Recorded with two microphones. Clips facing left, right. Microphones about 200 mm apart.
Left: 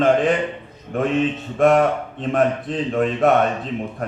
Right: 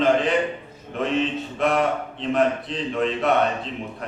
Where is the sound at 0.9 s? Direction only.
50° left (ahead or behind).